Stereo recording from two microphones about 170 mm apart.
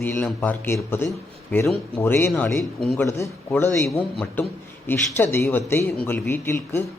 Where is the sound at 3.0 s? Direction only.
15° left (ahead or behind).